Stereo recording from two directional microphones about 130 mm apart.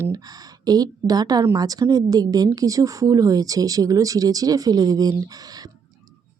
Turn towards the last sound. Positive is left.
turn(degrees=-30)  # may be behind; listen again after turning